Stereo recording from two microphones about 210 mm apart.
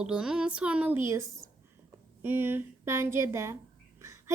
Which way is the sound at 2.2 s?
10° right (ahead or behind).